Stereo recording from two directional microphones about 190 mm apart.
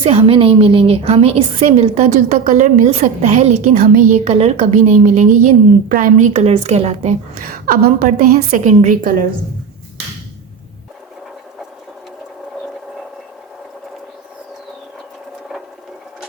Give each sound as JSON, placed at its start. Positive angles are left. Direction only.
{"t": 0.0, "sound": "a woman's voice", "side_deg": -30}
{"t": 2.4, "sound": "a woman's voice", "side_deg": -45}
{"t": 8.4, "sound": "a woman's voice", "side_deg": -40}